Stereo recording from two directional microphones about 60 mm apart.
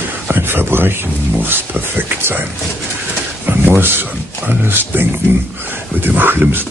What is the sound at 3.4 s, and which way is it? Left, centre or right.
Speech, right.